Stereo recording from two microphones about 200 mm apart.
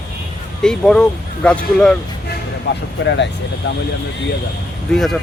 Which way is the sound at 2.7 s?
60° left (ahead or behind).